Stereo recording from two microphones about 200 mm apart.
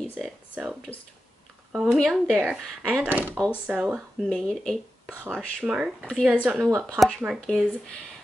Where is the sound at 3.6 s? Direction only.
5° right (ahead or behind).